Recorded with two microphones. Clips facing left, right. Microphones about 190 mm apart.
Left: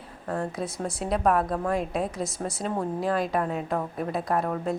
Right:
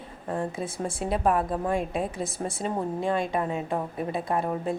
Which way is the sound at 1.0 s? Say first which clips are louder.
Left 1 dB; centre (ahead or behind).